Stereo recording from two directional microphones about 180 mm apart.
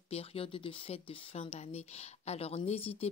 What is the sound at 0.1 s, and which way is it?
Speech, 35° left (ahead or behind).